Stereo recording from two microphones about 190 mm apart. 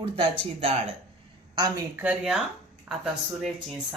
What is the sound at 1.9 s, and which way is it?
A woman's voice, 10° right (ahead or behind).